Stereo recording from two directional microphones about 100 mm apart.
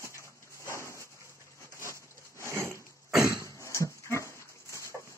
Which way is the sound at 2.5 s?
25° right (ahead or behind).